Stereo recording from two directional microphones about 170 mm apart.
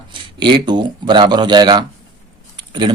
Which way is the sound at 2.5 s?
25° right (ahead or behind).